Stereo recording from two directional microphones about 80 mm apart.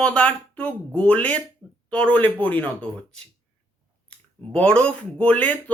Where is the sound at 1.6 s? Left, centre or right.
Right.